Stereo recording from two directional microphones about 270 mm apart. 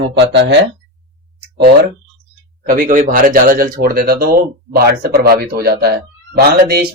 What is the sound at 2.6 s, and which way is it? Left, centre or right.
Speech, right.